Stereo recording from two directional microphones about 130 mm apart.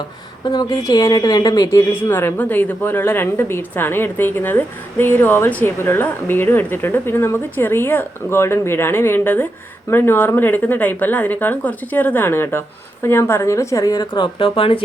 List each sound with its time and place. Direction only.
0.4 s a woman's voice: 30° left (ahead or behind)